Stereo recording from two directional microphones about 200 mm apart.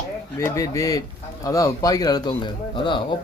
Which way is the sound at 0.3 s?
15° left (ahead or behind).